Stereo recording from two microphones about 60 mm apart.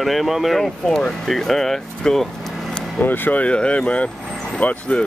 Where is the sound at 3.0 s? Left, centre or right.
Left.